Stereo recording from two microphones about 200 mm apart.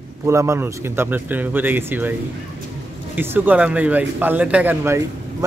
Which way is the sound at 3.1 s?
10° right (ahead or behind).